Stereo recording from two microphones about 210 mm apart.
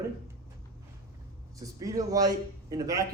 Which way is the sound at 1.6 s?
15° right (ahead or behind).